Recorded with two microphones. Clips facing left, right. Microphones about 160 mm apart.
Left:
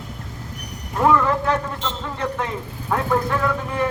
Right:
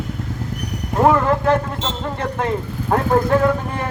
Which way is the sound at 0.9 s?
40° right (ahead or behind).